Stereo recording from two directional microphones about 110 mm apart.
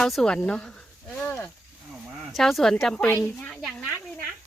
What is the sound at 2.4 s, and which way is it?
Speech, centre (ahead or behind).